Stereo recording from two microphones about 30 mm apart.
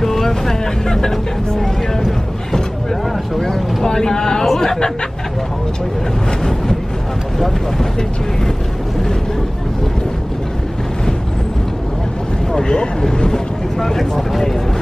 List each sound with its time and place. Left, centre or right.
0.0 s speech: centre
3.8 s speech: left
4.6 s a sound: left
13.2 s speech: centre